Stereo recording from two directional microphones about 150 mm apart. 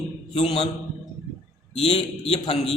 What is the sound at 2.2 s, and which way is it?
Speech, 45° left (ahead or behind).